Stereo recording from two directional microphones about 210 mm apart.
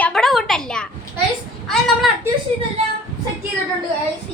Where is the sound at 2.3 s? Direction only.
10° right (ahead or behind).